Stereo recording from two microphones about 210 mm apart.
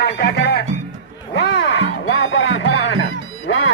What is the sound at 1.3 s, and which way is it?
Music, 55° left (ahead or behind).